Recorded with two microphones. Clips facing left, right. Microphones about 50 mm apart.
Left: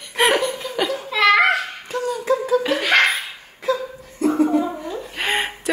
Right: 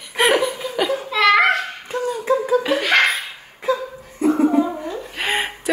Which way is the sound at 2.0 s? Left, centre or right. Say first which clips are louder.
Right 1 dB; centre.